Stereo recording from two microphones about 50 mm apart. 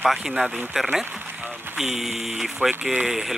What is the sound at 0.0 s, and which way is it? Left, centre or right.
Speech, centre.